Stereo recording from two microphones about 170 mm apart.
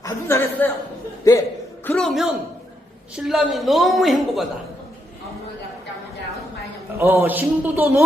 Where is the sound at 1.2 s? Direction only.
20° left (ahead or behind).